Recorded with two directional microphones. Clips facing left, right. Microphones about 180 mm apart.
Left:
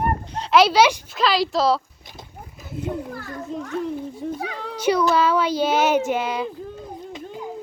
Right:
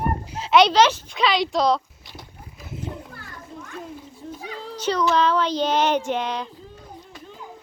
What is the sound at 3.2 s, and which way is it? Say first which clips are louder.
Children playing: left 9 dB; 70° left (ahead or behind).